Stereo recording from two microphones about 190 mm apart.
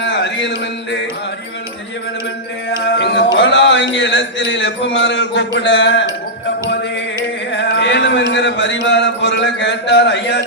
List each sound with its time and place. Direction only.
0.0 s a sound: 65° left (ahead or behind)
2.8 s music: 65° left (ahead or behind)
3.3 s a man's voice: 70° left (ahead or behind)
7.5 s music: 70° left (ahead or behind)
8.3 s a man's voice: 70° left (ahead or behind)